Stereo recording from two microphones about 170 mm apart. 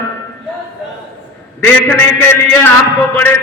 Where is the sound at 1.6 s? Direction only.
10° left (ahead or behind).